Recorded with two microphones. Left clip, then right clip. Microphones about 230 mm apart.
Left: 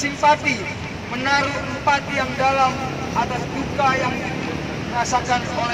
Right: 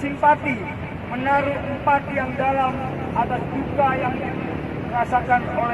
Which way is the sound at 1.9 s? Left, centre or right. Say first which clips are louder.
Even; right.